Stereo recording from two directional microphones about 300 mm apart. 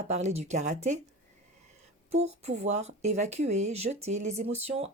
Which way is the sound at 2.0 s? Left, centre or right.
Right.